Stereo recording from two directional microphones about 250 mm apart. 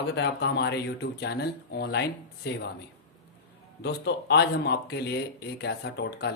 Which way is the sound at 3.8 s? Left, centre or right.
Left.